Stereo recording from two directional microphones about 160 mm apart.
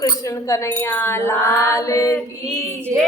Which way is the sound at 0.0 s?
20° left (ahead or behind).